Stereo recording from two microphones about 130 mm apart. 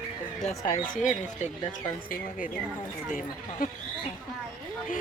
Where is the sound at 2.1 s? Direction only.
90° left.